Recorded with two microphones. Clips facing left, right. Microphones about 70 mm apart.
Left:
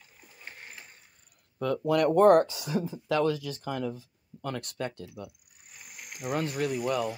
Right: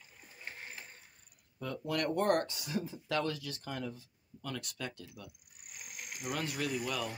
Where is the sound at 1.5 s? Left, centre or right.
Left.